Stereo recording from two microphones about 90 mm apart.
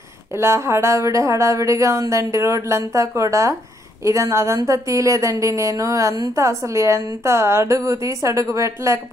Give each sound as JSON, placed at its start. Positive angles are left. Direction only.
{"t": 0.4, "sound": "speech", "side_deg": -30}